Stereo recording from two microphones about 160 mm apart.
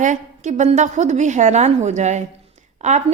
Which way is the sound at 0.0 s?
50° right (ahead or behind).